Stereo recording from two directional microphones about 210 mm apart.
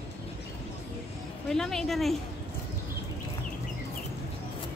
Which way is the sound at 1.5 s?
Centre (ahead or behind).